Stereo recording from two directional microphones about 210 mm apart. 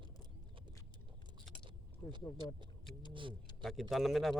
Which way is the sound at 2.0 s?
25° left (ahead or behind).